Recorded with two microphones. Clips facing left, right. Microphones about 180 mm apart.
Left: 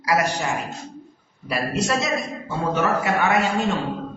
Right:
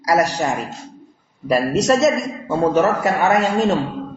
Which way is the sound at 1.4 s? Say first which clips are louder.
Right 8 dB; 40° right (ahead or behind).